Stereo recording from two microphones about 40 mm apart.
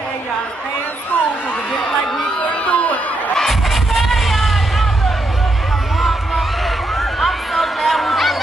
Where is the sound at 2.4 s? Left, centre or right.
Left.